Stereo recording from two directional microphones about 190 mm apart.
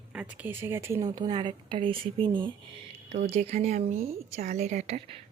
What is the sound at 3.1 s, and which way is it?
A woman's voice, 35° right (ahead or behind).